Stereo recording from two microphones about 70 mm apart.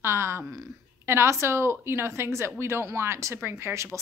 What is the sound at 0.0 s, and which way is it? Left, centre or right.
A woman's voice, right.